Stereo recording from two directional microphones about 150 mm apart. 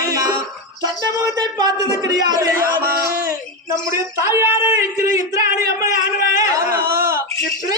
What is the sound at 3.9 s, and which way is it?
Speech, 15° right (ahead or behind).